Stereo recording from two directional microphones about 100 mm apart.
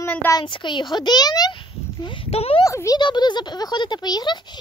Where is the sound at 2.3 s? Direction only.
90° left.